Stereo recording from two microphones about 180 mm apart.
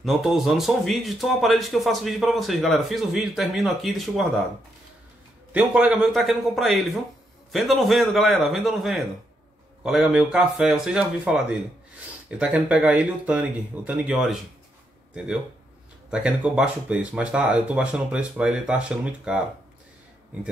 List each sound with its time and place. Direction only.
0.0 s a man's voice: centre (ahead or behind)
5.5 s a man's voice: 5° right (ahead or behind)
16.1 s a man's voice: 5° right (ahead or behind)